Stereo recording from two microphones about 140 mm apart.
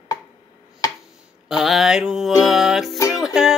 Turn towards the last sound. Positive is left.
turn(degrees=-5)  # may be behind; listen again after turning